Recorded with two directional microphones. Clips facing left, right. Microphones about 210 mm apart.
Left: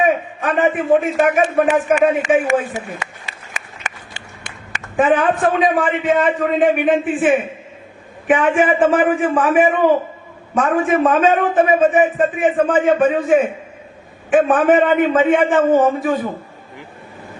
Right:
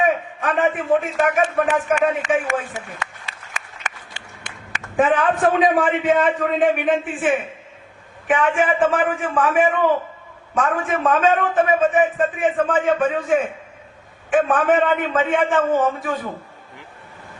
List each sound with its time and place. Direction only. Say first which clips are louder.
0.0 s a man's voice: left 3 dB; 10° left (ahead or behind)
2.6 s a sound: left 5 dB; 5° left (ahead or behind)
6.1 s a man's voice: left 3 dB; 5° left (ahead or behind)
10.8 s a man's voice: left 8 dB; 5° left (ahead or behind)
14.4 s a man's voice: left 5 dB; 15° left (ahead or behind)
14.7 s a man's voice: left 5 dB; 5° left (ahead or behind)